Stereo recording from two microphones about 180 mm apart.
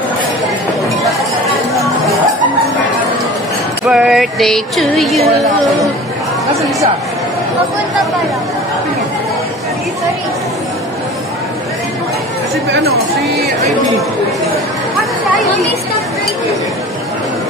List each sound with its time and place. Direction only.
3.8 s music: 5° right (ahead or behind)
13.2 s speech: centre (ahead or behind)